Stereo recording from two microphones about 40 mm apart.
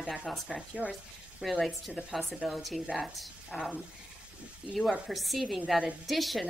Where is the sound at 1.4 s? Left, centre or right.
Centre.